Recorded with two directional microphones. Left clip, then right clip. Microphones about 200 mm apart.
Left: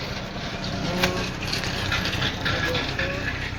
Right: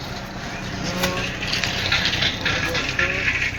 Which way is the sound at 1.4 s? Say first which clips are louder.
Right 5 dB; 45° left (ahead or behind).